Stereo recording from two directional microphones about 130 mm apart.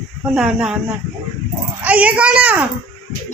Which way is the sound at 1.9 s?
10° right (ahead or behind).